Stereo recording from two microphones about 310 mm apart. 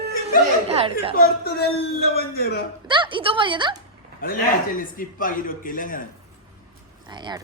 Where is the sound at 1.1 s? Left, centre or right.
Left.